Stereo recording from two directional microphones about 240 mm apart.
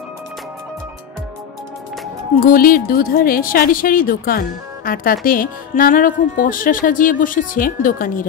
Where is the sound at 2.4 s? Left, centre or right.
Left.